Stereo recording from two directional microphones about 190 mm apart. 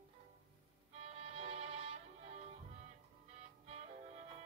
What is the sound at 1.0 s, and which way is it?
Music, 30° right (ahead or behind).